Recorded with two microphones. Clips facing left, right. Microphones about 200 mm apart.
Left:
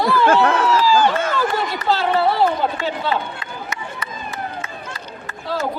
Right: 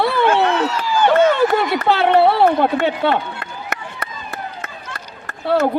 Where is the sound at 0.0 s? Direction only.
65° right (ahead or behind).